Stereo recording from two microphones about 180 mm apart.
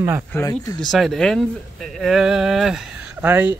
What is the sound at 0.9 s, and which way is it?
Speech, centre (ahead or behind).